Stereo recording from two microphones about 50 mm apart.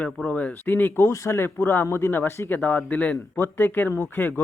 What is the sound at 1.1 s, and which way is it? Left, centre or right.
Speech, left.